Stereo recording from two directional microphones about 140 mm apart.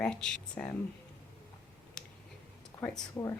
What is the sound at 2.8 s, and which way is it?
Speech, 10° left (ahead or behind).